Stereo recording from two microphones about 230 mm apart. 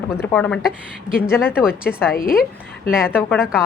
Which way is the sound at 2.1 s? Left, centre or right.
Left.